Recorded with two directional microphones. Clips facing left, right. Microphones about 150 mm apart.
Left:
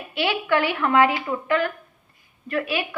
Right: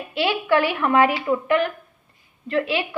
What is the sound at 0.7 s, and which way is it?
A woman's voice, 20° right (ahead or behind).